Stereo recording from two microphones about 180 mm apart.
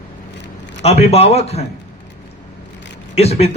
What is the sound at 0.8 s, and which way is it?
Speech, 35° left (ahead or behind).